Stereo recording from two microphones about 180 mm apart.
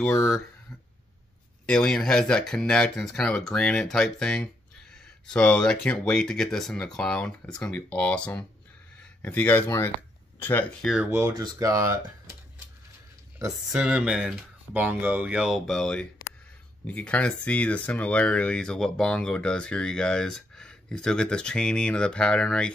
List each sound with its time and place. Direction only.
0.0 s speech: centre (ahead or behind)
1.7 s speech: 5° left (ahead or behind)
4.9 s a sound: 5° left (ahead or behind)
5.9 s speech: 5° left (ahead or behind)
11.1 s speech: 15° right (ahead or behind)
13.7 s speech: 5° right (ahead or behind)